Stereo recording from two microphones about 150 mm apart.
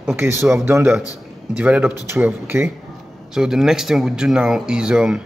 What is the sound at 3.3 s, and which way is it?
Speech, 5° right (ahead or behind).